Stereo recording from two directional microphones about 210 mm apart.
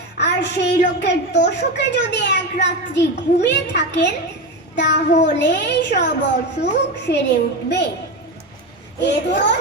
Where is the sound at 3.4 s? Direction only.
55° left (ahead or behind).